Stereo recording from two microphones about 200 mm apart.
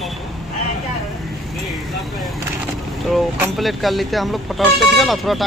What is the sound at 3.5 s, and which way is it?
Speech, centre (ahead or behind).